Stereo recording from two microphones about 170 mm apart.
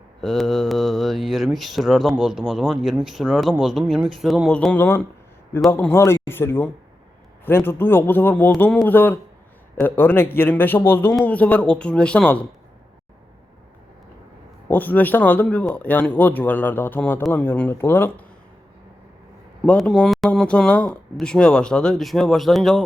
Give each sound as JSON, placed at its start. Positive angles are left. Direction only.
{"t": 0.2, "sound": "speech", "side_deg": 0}
{"t": 14.7, "sound": "speech", "side_deg": 10}
{"t": 19.6, "sound": "speech", "side_deg": 5}